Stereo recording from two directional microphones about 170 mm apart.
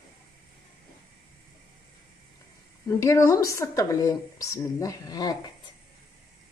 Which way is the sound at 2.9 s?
20° left (ahead or behind).